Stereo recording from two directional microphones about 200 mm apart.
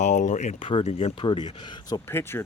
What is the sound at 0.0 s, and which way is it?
Speech, 35° left (ahead or behind).